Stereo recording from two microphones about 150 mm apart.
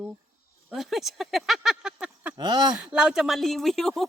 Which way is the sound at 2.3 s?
30° right (ahead or behind).